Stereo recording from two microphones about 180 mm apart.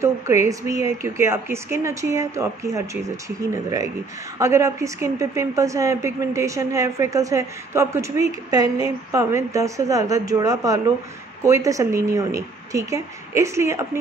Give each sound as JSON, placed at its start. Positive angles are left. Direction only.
{"t": 0.0, "sound": "a woman's voice", "side_deg": -15}